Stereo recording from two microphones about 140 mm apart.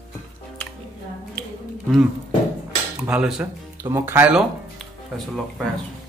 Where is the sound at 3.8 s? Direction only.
20° right (ahead or behind).